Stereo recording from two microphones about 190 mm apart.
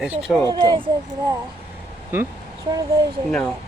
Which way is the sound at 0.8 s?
20° right (ahead or behind).